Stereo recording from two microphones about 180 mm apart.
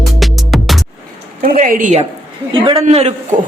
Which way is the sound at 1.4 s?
50° right (ahead or behind).